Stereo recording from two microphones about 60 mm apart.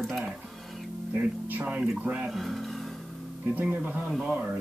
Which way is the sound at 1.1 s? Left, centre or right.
Right.